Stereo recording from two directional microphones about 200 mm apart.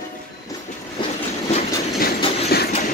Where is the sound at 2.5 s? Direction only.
50° left (ahead or behind).